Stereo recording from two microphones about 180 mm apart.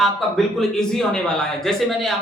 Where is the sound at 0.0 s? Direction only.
Centre (ahead or behind).